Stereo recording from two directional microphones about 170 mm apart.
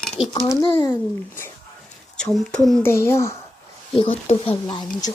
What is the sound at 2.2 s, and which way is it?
Speech, 5° left (ahead or behind).